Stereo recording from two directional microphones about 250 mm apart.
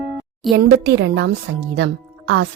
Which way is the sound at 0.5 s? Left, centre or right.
Right.